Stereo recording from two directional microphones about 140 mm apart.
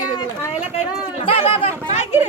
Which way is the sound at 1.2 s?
40° left (ahead or behind).